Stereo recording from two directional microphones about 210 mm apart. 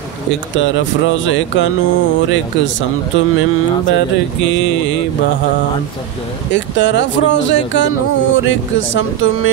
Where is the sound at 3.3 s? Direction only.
80° left.